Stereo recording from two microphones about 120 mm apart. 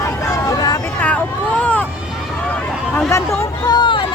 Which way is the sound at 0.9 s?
10° left (ahead or behind).